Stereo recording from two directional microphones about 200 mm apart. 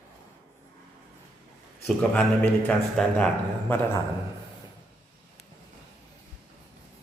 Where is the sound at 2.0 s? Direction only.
5° left (ahead or behind).